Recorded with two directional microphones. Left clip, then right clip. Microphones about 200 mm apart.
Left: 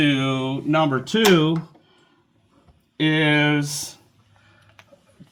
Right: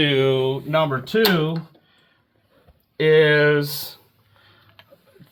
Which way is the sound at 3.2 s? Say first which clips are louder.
Right 2 dB; 45° right (ahead or behind).